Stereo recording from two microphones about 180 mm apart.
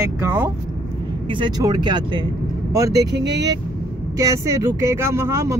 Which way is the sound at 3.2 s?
75° right (ahead or behind).